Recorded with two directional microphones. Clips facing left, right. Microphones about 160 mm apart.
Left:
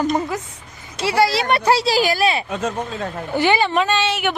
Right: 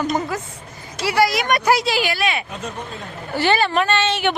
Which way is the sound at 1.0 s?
25° left (ahead or behind).